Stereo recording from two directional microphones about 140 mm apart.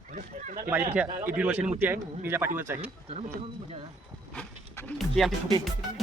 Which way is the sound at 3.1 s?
50° right (ahead or behind).